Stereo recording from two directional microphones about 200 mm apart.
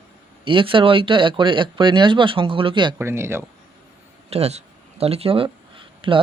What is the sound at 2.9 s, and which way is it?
Speech, 10° right (ahead or behind).